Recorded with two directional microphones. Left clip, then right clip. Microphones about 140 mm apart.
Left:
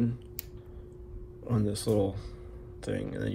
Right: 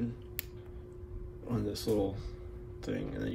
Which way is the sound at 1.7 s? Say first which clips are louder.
Left 3 dB; 65° left (ahead or behind).